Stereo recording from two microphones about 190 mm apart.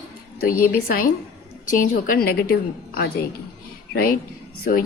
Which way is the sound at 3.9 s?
55° left (ahead or behind).